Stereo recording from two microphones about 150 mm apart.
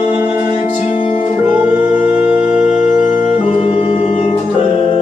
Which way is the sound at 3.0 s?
45° left (ahead or behind).